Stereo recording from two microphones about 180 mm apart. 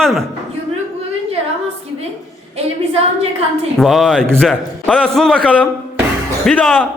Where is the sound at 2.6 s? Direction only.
35° right (ahead or behind).